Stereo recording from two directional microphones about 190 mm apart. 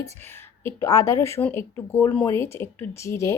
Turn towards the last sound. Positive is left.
turn(degrees=15)  # may be behind; listen again after turning